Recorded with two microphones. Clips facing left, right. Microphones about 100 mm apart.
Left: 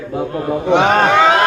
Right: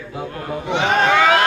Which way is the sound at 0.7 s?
75° left (ahead or behind).